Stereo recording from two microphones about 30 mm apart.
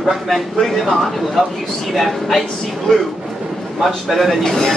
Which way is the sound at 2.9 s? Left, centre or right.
Left.